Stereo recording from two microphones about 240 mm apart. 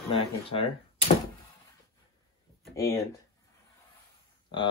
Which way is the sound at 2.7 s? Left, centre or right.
Centre.